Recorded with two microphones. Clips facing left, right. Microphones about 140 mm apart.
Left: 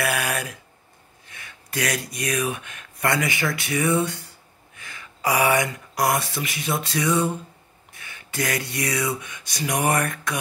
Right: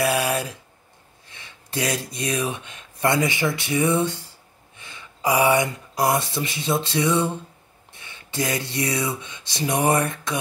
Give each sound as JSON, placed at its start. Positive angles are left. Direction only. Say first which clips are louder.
{"t": 0.0, "sound": "a sound", "louder": "right 4 dB", "side_deg": -25}
{"t": 1.3, "sound": "speech", "louder": "right 1 dB", "side_deg": -25}
{"t": 5.3, "sound": "speech", "louder": "right 2 dB", "side_deg": -15}
{"t": 5.9, "sound": "speech", "louder": "right 1 dB", "side_deg": -25}